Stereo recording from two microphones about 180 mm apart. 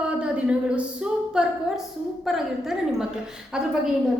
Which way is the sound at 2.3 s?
Centre (ahead or behind).